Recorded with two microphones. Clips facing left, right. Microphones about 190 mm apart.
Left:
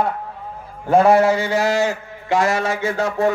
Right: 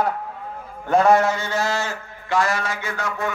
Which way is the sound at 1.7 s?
20° left (ahead or behind).